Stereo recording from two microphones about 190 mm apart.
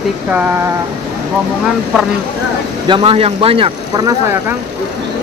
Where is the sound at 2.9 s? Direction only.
30° right (ahead or behind).